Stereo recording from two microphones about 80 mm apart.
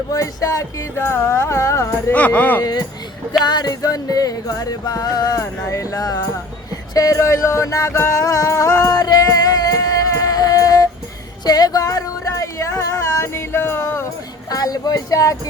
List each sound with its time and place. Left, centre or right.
0.1 s music: left
2.1 s speech: centre
2.6 s speech: left
3.4 s music: left
11.4 s a sound: left
14.5 s music: left